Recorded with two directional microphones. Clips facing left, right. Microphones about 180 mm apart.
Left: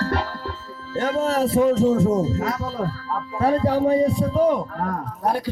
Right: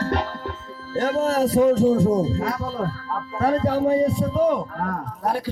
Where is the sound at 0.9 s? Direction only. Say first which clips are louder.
Right 1 dB; 40° right (ahead or behind).